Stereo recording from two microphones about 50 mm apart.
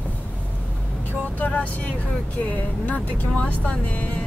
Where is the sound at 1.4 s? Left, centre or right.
Left.